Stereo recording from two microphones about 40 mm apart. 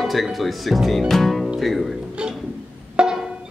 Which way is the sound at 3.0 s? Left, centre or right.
Right.